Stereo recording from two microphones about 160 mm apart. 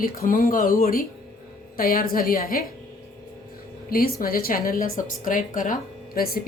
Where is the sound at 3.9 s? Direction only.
65° left (ahead or behind).